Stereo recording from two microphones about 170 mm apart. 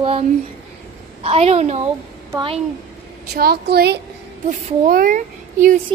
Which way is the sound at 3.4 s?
65° right (ahead or behind).